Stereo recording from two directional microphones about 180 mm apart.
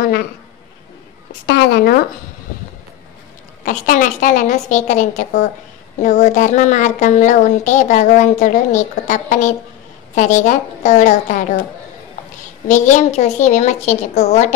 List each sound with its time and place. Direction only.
0.0 s a sound: 55° left (ahead or behind)
1.5 s speech: 60° left (ahead or behind)
3.6 s a woman's voice: 45° left (ahead or behind)
12.6 s a woman's voice: 40° left (ahead or behind)